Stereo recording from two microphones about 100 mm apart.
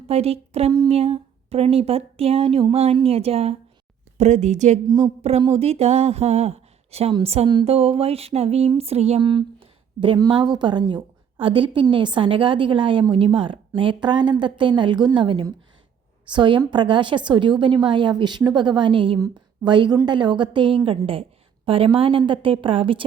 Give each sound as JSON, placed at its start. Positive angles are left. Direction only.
{"t": 0.1, "sound": "speech", "side_deg": -90}
{"t": 4.9, "sound": "a woman's voice", "side_deg": -45}
{"t": 5.5, "sound": "speech", "side_deg": -85}
{"t": 9.2, "sound": "a sound", "side_deg": -55}
{"t": 10.2, "sound": "a woman's voice", "side_deg": -45}
{"t": 21.1, "sound": "a sound", "side_deg": -65}
{"t": 21.9, "sound": "a woman's voice", "side_deg": -65}